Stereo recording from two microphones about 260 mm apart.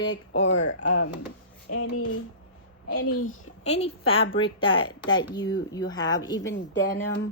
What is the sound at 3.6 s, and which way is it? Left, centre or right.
A woman's voice, left.